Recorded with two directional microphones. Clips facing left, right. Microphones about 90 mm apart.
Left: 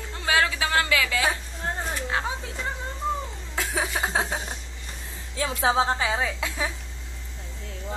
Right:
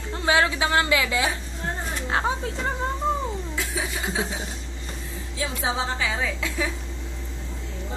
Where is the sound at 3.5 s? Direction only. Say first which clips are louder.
Left 2 dB; 50° left (ahead or behind).